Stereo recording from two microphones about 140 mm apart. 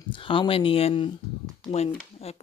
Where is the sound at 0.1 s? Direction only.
35° left (ahead or behind).